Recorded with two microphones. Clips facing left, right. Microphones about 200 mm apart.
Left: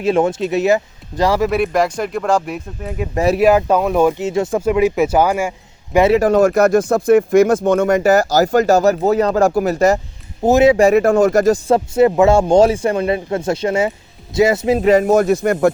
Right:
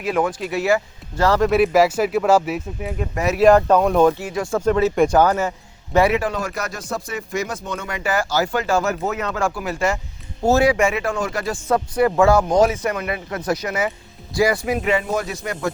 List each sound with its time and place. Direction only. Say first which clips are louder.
0.0 s speech: left 6 dB; 25° left (ahead or behind)
1.5 s speech: right 1 dB; centre (ahead or behind)
3.4 s a man's voice: right 2 dB; 5° left (ahead or behind)
4.2 s speech: left 5 dB; 25° left (ahead or behind)
4.6 s a man's voice: even; 10° left (ahead or behind)
6.1 s speech: left 12 dB; 45° left (ahead or behind)
10.4 s speech: left 5 dB; 20° left (ahead or behind)
10.8 s speech: left 10 dB; 45° left (ahead or behind)
11.7 s speech: left 5 dB; 25° left (ahead or behind)
14.8 s speech: left 9 dB; 40° left (ahead or behind)